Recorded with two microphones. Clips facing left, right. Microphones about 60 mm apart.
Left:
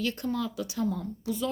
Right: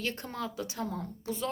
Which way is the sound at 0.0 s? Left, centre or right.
Right.